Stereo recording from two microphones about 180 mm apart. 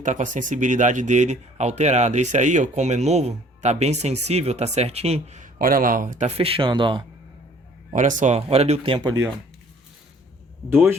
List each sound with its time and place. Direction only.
0.0 s speech: 45° right (ahead or behind); by 7.0 s 25° right (ahead or behind)
7.9 s speech: 45° right (ahead or behind)
10.7 s speech: 10° right (ahead or behind)